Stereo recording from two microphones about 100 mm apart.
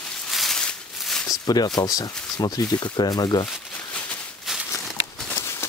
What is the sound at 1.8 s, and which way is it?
Speech, 40° left (ahead or behind).